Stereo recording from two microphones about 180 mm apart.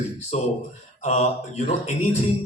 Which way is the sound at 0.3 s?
40° left (ahead or behind).